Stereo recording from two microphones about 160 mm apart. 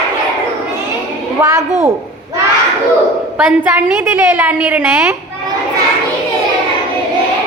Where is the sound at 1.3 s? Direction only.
15° right (ahead or behind).